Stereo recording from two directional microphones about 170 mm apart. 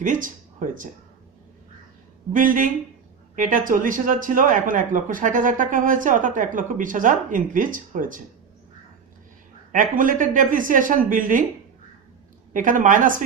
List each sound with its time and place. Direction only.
0.0 s speech: 50° right (ahead or behind)
2.3 s speech: 55° right (ahead or behind)
9.7 s speech: 50° right (ahead or behind)
12.5 s speech: 50° right (ahead or behind)